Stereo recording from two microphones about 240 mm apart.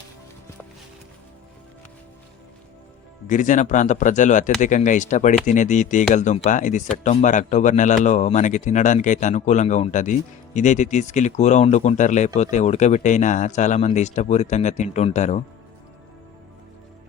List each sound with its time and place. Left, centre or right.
3.2 s speech: left